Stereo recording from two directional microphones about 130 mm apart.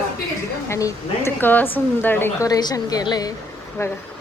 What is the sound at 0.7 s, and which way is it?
A woman's voice, 25° left (ahead or behind).